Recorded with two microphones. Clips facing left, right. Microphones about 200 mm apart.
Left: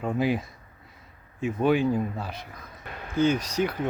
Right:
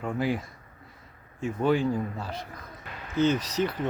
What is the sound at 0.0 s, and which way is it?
Speech, 20° left (ahead or behind).